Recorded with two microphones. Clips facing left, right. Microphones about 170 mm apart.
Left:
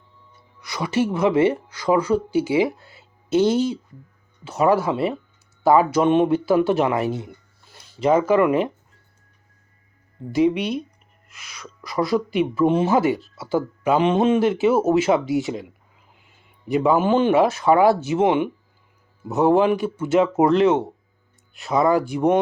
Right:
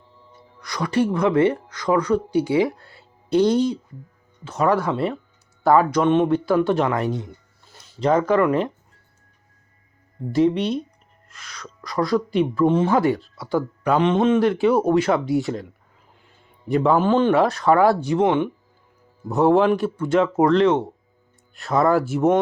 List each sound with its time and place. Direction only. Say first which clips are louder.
0.1 s music: right 5 dB; 30° right (ahead or behind)
0.6 s speech: right 1 dB; 5° left (ahead or behind)
10.3 s speech: even; centre (ahead or behind)